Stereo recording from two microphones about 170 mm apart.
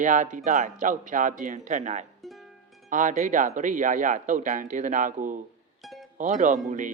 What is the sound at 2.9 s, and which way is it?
Speech, 50° right (ahead or behind).